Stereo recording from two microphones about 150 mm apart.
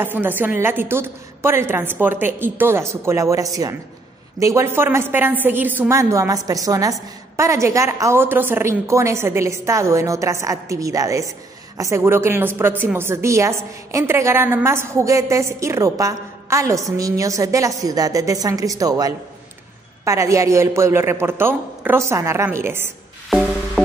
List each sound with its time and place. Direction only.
0.0 s a woman's voice: 15° right (ahead or behind)